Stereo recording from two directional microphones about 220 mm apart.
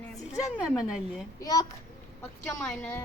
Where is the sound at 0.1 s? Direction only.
5° left (ahead or behind).